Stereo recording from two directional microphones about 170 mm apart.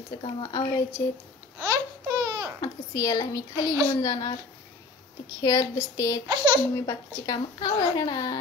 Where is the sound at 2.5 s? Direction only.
20° left (ahead or behind).